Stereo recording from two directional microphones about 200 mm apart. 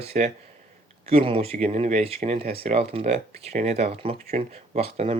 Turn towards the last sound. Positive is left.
turn(degrees=-30)  # may be behind; listen again after turning